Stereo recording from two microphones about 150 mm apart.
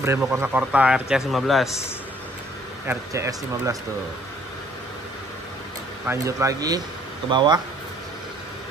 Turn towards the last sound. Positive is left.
turn(degrees=-30)  # may be behind; listen again after turning